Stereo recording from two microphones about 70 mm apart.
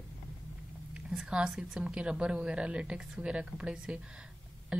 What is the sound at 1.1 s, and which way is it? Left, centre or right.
Speech, centre.